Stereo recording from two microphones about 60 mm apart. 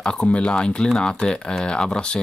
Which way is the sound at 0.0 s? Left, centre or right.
Centre.